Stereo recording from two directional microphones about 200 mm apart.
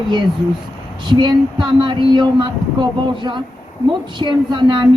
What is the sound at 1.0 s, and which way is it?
Speech, 20° right (ahead or behind).